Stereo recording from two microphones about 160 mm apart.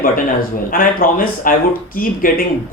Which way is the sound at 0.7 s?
60° left (ahead or behind).